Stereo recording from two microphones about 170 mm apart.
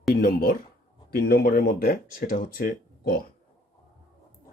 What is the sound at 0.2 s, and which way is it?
Speech, 60° left (ahead or behind).